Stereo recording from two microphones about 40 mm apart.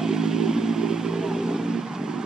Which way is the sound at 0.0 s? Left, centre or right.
Centre.